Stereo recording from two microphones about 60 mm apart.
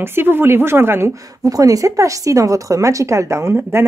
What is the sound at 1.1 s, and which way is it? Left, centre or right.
Speech, right.